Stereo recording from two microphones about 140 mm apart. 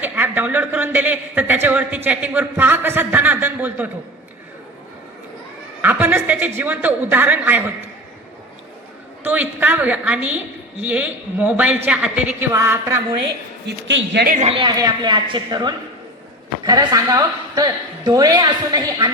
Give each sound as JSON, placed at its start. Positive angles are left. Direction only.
{"t": 0.0, "sound": "a man's voice", "side_deg": -15}
{"t": 2.0, "sound": "a sound", "side_deg": -10}
{"t": 5.8, "sound": "chuckle", "side_deg": -10}
{"t": 6.6, "sound": "a woman's voice", "side_deg": -10}
{"t": 9.2, "sound": "a woman's voice", "side_deg": -10}
{"t": 14.4, "sound": "a woman's voice", "side_deg": -40}